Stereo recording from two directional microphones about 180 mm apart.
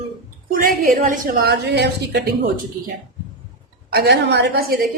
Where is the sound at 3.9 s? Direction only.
70° right (ahead or behind).